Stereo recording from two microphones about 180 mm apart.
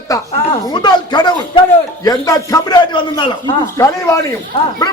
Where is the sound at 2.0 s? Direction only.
20° left (ahead or behind).